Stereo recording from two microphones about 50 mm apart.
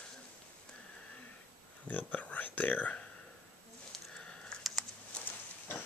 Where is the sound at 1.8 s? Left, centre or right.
Left.